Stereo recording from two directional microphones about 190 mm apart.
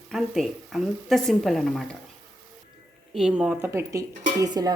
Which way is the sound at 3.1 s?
5° right (ahead or behind).